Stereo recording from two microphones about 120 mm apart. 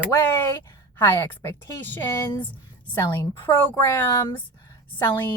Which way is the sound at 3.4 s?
20° left (ahead or behind).